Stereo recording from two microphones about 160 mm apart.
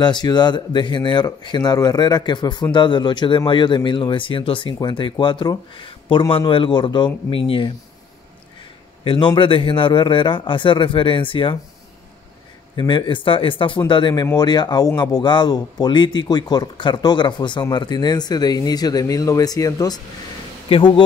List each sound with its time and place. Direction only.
0.0 s a man's voice: 25° left (ahead or behind)
9.0 s a man's voice: 30° left (ahead or behind)
12.7 s a man's voice: 30° left (ahead or behind)